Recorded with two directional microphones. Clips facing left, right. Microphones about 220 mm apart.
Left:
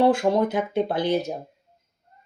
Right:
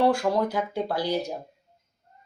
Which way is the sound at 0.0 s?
20° left (ahead or behind).